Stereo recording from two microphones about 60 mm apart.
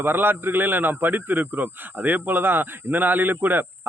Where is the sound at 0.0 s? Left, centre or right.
Right.